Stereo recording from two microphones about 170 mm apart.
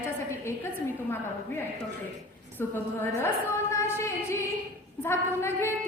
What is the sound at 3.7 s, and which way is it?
Music, 15° left (ahead or behind).